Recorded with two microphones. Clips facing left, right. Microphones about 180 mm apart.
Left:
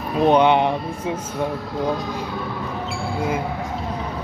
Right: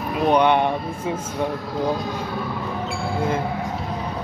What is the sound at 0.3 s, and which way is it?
Speech, 20° left (ahead or behind).